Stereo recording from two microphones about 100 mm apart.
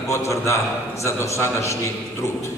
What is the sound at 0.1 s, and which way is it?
A man's voice, 30° left (ahead or behind).